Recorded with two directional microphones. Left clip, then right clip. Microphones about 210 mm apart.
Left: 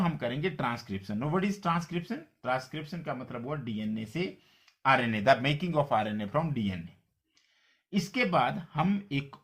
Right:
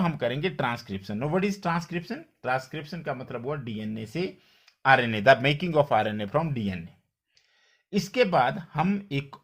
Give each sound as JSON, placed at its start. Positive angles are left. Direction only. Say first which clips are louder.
{"t": 0.0, "sound": "speech", "louder": "right 4 dB", "side_deg": -45}
{"t": 7.9, "sound": "speech", "louder": "right 6 dB", "side_deg": -45}